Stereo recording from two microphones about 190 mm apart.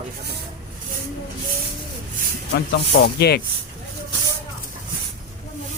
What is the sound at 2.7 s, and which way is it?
Speech, 60° left (ahead or behind).